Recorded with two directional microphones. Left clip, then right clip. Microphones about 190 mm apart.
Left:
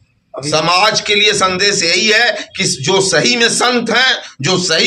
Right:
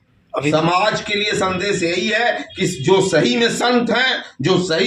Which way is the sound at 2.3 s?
Centre (ahead or behind).